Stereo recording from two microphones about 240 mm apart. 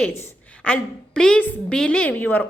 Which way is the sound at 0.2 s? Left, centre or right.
Centre.